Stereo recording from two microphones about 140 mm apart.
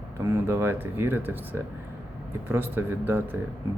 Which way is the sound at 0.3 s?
20° right (ahead or behind).